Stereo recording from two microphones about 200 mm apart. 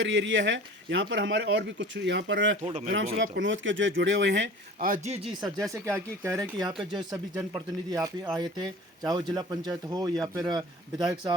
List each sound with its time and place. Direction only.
0.0 s speech: 70° right (ahead or behind)
4.8 s a man's voice: 40° right (ahead or behind)
5.2 s speech: centre (ahead or behind)
5.8 s speech: 15° right (ahead or behind)